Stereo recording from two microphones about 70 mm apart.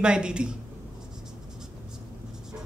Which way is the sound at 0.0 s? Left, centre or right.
Centre.